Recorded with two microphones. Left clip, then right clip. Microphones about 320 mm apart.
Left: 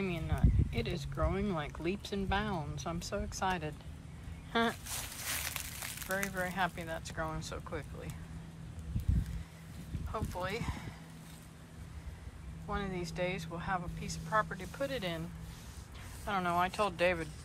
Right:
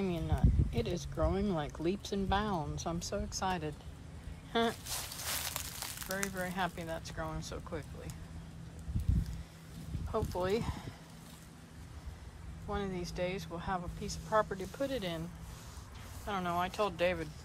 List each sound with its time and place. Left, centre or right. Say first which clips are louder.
0.0 s a sound: right 1 dB; centre
1.1 s speech: right 1 dB; centre
4.5 s a sound: even; centre
5.3 s speech: left 1 dB; centre
10.1 s speech: right 4 dB; centre
12.6 s speech: even; centre
16.3 s speech: left 3 dB; centre